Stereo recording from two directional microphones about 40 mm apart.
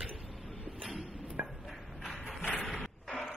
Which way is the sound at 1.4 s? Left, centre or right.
Right.